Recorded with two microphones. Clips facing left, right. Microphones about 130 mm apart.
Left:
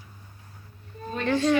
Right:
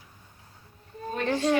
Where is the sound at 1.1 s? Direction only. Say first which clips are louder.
Left 2 dB; 40° right (ahead or behind).